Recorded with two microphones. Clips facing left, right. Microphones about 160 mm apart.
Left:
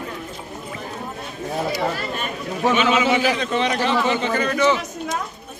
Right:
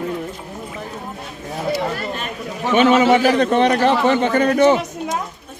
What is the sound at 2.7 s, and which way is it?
A man's voice, 55° right (ahead or behind).